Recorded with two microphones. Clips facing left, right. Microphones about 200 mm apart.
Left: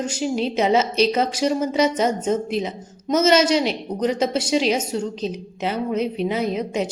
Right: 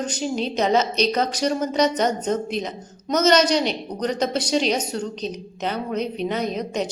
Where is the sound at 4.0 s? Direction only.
5° left (ahead or behind).